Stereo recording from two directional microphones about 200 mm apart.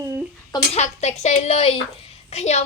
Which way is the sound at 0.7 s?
35° left (ahead or behind).